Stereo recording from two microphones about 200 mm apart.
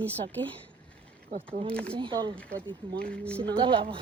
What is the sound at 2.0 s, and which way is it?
Speech, 25° right (ahead or behind).